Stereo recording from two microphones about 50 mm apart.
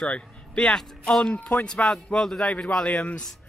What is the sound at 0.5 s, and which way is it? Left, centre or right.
A man's voice, centre.